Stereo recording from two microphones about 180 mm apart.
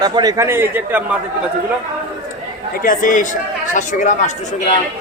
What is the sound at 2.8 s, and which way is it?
Speech, 50° left (ahead or behind).